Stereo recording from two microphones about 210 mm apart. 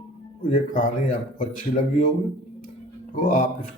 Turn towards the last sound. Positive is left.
turn(degrees=40)  # may be behind; listen again after turning